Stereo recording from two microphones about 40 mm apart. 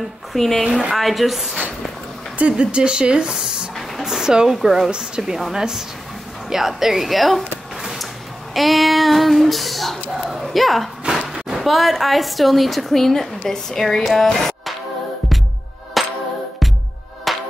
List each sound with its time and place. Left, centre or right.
0.3 s a woman's voice: centre
2.6 s speech: right
4.0 s a sound: centre
4.6 s speech: centre
6.5 s a sound: centre
8.5 s child singing: centre
10.4 s speech: centre
11.1 s a sound: centre
11.5 s a woman's voice: centre
16.0 s music: centre
17.3 s music: centre